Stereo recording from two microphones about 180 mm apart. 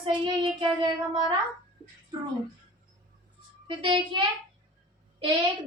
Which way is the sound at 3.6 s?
25° right (ahead or behind).